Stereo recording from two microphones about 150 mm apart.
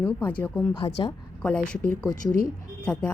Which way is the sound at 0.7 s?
35° left (ahead or behind).